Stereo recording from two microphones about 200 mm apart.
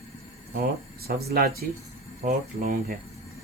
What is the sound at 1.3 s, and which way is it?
Speech, 50° right (ahead or behind).